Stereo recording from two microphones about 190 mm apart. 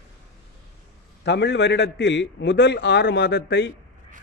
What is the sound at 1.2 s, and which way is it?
Speech, 65° left (ahead or behind).